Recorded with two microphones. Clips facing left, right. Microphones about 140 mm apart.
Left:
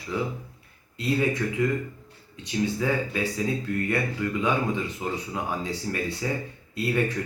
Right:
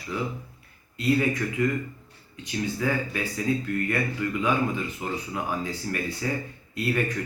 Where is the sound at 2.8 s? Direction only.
20° left (ahead or behind).